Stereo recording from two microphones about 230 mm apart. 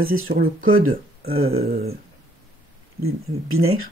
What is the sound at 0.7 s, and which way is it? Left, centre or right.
Speech, right.